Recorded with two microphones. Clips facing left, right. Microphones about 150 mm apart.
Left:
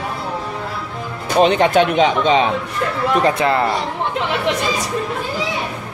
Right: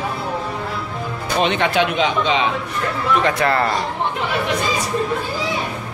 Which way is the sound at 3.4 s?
15° left (ahead or behind).